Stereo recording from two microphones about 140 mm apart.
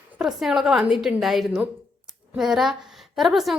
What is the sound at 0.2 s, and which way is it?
A woman's voice, centre (ahead or behind).